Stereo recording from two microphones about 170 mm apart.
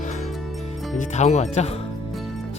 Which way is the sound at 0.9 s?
40° left (ahead or behind).